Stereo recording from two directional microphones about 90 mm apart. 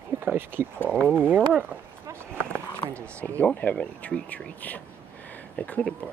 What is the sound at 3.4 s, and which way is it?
Speech, 15° left (ahead or behind).